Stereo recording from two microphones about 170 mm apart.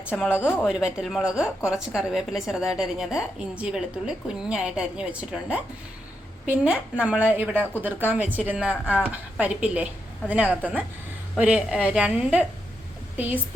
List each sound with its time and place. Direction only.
0.3 s a woman's voice: 15° left (ahead or behind)
0.6 s a woman's voice: 5° right (ahead or behind)